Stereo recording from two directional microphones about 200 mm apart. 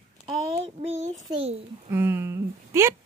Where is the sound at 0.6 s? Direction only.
35° right (ahead or behind).